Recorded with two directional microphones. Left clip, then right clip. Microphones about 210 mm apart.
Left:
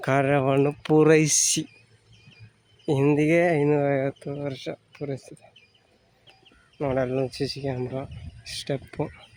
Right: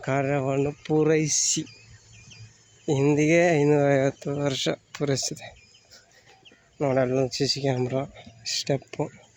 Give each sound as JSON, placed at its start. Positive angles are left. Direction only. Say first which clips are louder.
{"t": 0.0, "sound": "speech", "louder": "left 4 dB", "side_deg": 15}
{"t": 2.8, "sound": "speech", "louder": "even", "side_deg": 10}
{"t": 6.7, "sound": "speech", "louder": "right 2 dB", "side_deg": -5}